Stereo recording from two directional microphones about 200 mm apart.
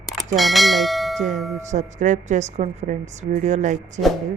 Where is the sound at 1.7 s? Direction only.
40° right (ahead or behind).